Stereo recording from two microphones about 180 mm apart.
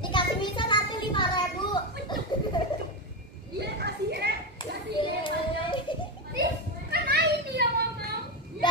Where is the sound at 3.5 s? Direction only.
65° right (ahead or behind).